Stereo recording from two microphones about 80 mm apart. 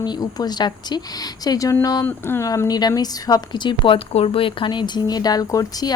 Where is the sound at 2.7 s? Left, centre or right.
Left.